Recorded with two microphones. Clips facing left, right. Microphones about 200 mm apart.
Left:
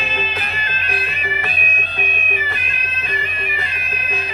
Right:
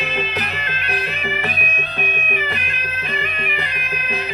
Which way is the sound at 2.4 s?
65° right (ahead or behind).